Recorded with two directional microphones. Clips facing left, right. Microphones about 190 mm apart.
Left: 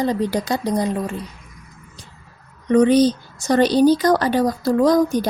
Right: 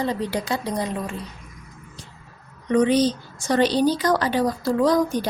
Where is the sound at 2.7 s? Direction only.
40° left (ahead or behind).